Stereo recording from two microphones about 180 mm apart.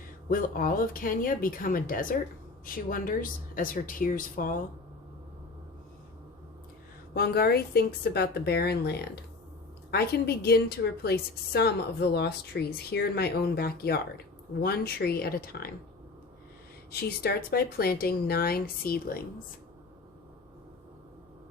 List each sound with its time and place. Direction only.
0.3 s speech: 50° left (ahead or behind)
7.1 s a woman's voice: 60° left (ahead or behind)
16.9 s a woman's voice: 60° left (ahead or behind)